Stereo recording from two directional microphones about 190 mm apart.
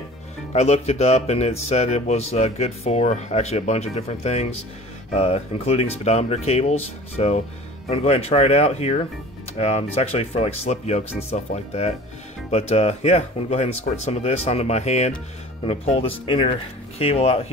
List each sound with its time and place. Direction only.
0.5 s speech: 35° left (ahead or behind)